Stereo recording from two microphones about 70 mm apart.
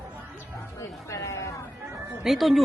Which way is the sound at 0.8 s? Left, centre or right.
Left.